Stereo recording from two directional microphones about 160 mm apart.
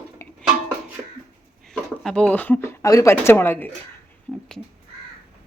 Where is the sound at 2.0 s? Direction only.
5° left (ahead or behind).